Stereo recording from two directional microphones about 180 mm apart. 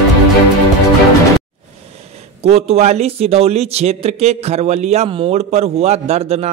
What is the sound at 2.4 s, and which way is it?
Speech, 35° right (ahead or behind).